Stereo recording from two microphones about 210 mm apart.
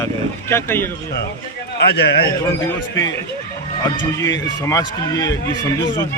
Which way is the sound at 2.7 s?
15° left (ahead or behind).